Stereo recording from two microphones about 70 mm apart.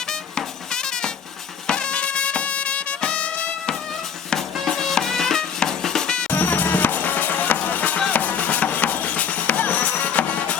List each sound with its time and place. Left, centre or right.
0.1 s music: centre
6.3 s music: left